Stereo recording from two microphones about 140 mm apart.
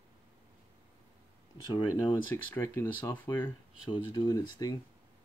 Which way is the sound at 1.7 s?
30° left (ahead or behind).